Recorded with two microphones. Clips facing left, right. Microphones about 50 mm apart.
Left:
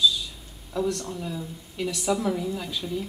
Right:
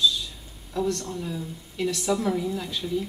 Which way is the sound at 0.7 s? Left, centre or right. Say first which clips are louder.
Even; centre.